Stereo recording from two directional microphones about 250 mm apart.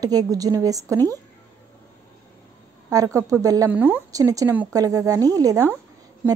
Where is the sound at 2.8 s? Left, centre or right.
Centre.